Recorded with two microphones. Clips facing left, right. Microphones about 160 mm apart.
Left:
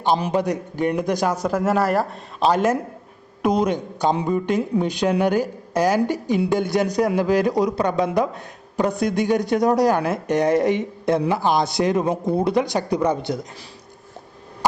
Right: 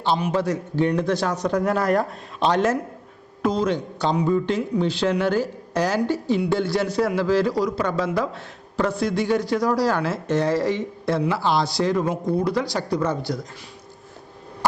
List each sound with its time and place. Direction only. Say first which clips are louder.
0.3 s speech: even; 15° left (ahead or behind)